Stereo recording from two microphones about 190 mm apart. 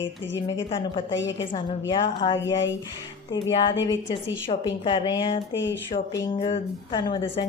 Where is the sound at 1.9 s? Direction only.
25° left (ahead or behind).